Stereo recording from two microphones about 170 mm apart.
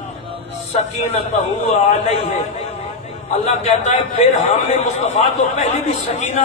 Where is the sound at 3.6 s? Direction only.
40° left (ahead or behind).